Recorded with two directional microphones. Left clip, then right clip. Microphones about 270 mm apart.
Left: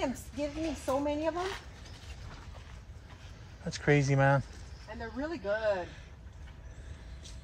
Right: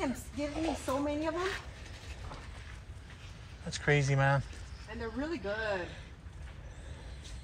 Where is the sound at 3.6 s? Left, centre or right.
Left.